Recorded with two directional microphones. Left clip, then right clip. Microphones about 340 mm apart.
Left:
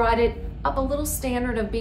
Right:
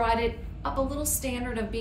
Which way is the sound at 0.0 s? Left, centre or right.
Centre.